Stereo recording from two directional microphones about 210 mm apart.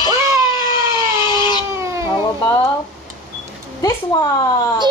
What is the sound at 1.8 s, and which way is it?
Cat, 15° right (ahead or behind).